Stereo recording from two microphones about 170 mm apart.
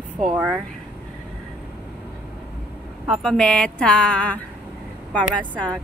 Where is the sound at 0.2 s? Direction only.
5° right (ahead or behind).